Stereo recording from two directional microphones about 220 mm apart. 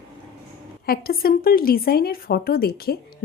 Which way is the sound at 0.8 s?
45° left (ahead or behind).